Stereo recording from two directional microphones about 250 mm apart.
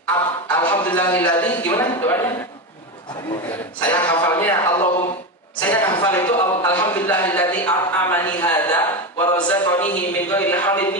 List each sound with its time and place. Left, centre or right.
0.0 s a sound: centre
0.8 s speech: centre
3.8 s speech: centre
5.6 s a sound: centre
6.0 s speech: centre
7.1 s a man's voice: centre